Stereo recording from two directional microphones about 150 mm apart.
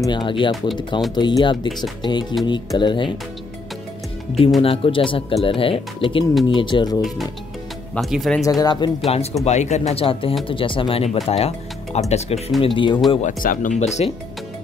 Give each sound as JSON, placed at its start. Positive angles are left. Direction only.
{"t": 0.0, "sound": "speech", "side_deg": 30}
{"t": 4.6, "sound": "speech", "side_deg": 40}
{"t": 7.9, "sound": "speech", "side_deg": 0}
{"t": 8.5, "sound": "speech", "side_deg": 25}
{"t": 9.0, "sound": "speech", "side_deg": 45}
{"t": 12.6, "sound": "speech", "side_deg": 35}
{"t": 13.2, "sound": "speech", "side_deg": 65}